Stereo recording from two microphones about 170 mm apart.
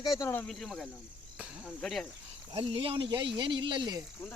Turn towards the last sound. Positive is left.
turn(degrees=-25)  # may be behind; listen again after turning